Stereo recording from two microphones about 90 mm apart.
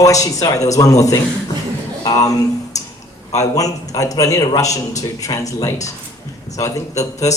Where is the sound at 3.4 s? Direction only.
40° left (ahead or behind).